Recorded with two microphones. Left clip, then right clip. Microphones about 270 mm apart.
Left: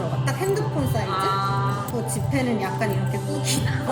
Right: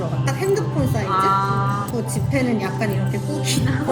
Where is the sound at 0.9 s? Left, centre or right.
Centre.